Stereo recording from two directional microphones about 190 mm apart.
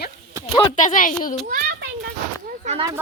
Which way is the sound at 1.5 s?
50° right (ahead or behind).